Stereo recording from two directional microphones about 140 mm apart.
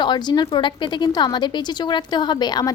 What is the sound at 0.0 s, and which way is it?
A woman's voice, 35° left (ahead or behind).